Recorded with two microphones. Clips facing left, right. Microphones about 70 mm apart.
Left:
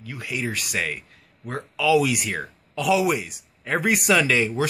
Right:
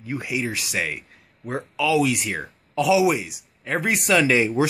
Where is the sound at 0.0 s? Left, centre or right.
Right.